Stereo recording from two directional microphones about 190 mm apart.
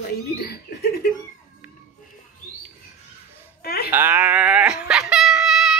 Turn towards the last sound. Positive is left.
turn(degrees=0)  # may be behind; listen again after turning